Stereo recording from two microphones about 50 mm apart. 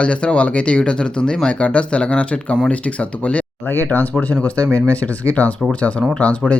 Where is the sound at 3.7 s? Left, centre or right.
Left.